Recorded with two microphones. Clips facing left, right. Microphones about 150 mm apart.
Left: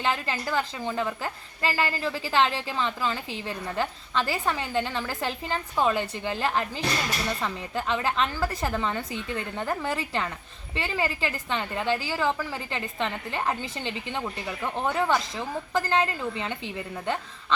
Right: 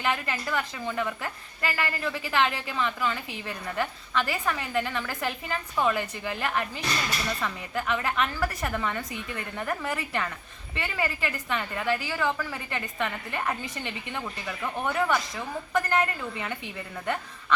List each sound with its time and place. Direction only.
0.0 s a woman's voice: 30° left (ahead or behind)